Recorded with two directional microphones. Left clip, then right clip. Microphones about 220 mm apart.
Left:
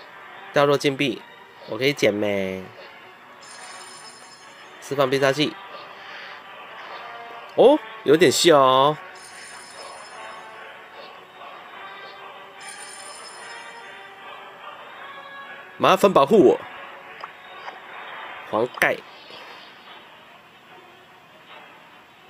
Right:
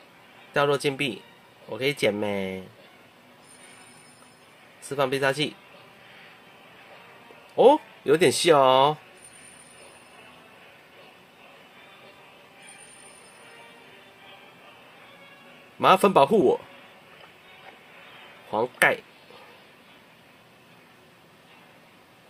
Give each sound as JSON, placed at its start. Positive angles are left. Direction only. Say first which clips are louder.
{"t": 0.5, "sound": "speech", "louder": "left 5 dB", "side_deg": 15}
{"t": 4.8, "sound": "speech", "louder": "left 4 dB", "side_deg": 15}
{"t": 7.5, "sound": "speech", "louder": "left 2 dB", "side_deg": 15}
{"t": 15.8, "sound": "speech", "louder": "left 2 dB", "side_deg": 20}
{"t": 18.5, "sound": "speech", "louder": "left 1 dB", "side_deg": 15}